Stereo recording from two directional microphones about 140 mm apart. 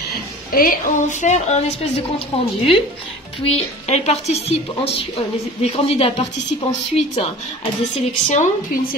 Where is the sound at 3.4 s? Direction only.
50° left (ahead or behind).